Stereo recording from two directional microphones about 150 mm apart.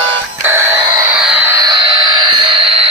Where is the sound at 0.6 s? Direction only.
20° right (ahead or behind).